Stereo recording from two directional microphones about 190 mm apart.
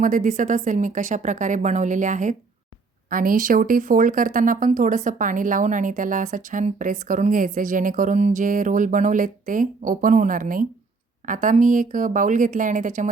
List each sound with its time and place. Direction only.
0.0 s a woman's voice: 45° right (ahead or behind)